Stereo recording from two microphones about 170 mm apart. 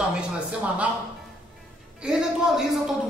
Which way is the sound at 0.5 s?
5° right (ahead or behind).